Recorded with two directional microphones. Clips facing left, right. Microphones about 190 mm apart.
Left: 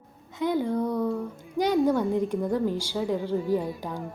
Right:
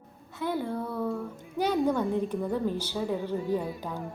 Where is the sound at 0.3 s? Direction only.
15° left (ahead or behind).